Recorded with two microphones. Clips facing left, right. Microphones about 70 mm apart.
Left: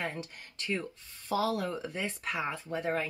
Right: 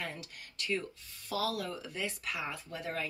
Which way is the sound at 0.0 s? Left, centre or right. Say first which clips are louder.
Left 5 dB; left.